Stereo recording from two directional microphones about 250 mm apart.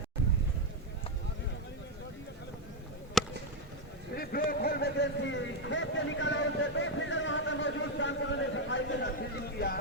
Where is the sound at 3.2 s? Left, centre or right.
Centre.